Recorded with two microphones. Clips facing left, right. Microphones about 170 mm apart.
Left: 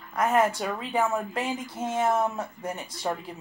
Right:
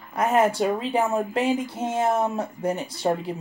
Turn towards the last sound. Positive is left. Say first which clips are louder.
# right 7 dB
turn(degrees=-35)  # may be behind; listen again after turning